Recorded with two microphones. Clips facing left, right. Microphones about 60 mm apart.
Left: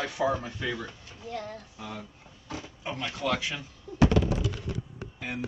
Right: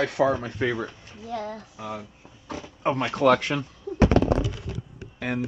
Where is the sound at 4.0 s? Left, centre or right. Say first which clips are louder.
Right 4 dB; right.